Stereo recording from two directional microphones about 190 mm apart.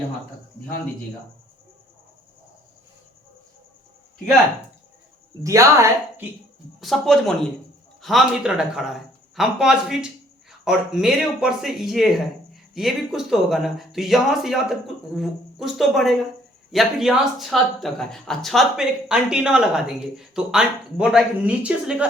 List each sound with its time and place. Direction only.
5.4 s speech: 15° right (ahead or behind)
6.8 s speech: centre (ahead or behind)